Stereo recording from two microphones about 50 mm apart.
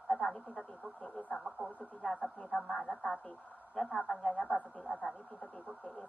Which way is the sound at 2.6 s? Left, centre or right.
Centre.